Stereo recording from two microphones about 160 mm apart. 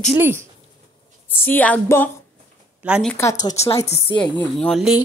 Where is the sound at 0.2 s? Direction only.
15° right (ahead or behind).